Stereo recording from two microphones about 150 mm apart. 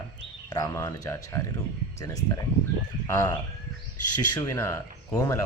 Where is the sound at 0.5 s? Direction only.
25° left (ahead or behind).